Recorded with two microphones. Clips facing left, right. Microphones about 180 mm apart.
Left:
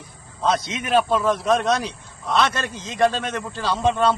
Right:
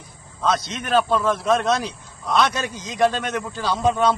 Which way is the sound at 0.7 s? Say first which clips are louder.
Even; 5° left (ahead or behind).